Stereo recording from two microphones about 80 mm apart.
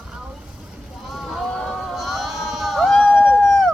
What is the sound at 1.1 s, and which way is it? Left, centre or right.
Sheep, centre.